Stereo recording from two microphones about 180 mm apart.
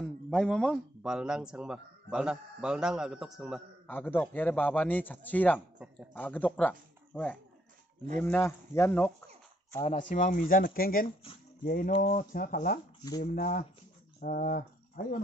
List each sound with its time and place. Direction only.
0.0 s a man's voice: 5° left (ahead or behind)
3.8 s a man's voice: 10° left (ahead or behind)
9.8 s speech: 40° left (ahead or behind)